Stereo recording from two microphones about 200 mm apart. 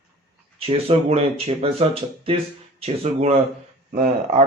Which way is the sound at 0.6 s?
30° right (ahead or behind).